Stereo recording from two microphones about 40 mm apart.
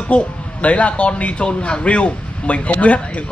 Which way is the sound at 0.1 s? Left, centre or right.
Left.